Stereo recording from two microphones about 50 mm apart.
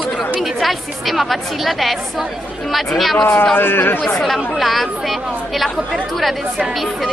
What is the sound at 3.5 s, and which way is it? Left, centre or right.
Speech, left.